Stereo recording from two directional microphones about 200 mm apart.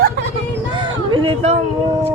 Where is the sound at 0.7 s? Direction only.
25° right (ahead or behind).